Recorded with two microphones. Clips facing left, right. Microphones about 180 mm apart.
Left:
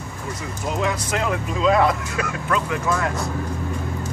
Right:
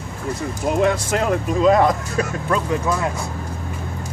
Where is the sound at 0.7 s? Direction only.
50° right (ahead or behind).